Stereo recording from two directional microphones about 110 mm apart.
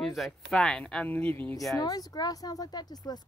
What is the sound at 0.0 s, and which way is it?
Speech, centre (ahead or behind).